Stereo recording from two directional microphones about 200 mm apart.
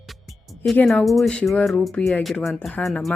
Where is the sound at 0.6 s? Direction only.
5° left (ahead or behind).